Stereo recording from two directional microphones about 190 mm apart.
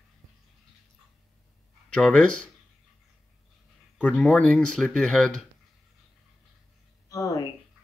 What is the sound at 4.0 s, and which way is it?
Speech, 5° left (ahead or behind).